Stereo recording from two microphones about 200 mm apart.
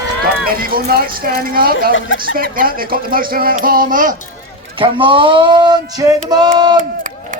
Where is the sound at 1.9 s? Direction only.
70° left (ahead or behind).